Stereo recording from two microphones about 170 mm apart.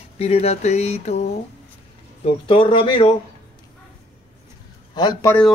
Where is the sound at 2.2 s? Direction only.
30° left (ahead or behind).